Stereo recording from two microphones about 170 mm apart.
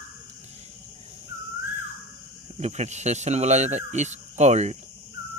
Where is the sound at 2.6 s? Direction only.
40° right (ahead or behind).